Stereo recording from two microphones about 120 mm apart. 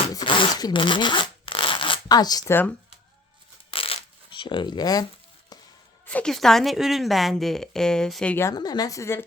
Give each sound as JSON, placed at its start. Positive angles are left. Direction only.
{"t": 0.1, "sound": "zipper", "side_deg": 40}
{"t": 2.5, "sound": "speech", "side_deg": 15}
{"t": 3.7, "sound": "shuffling cards", "side_deg": 50}
{"t": 6.1, "sound": "a woman's voice", "side_deg": 10}
{"t": 8.5, "sound": "a woman's voice", "side_deg": 35}